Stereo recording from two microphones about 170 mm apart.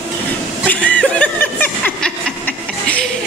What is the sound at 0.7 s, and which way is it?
Chuckle, 5° left (ahead or behind).